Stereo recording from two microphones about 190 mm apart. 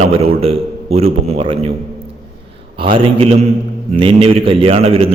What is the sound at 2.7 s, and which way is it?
Speech, 25° right (ahead or behind).